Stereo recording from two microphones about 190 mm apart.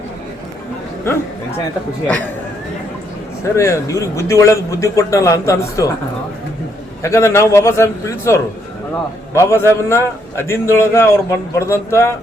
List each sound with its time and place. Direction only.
3.4 s a man's voice: 15° left (ahead or behind)
7.0 s a man's voice: 15° left (ahead or behind)